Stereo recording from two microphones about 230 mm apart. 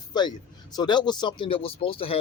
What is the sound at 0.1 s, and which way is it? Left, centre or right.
Speech, centre.